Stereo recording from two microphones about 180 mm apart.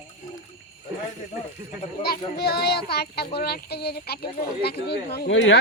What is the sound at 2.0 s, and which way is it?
Speech, 65° left (ahead or behind).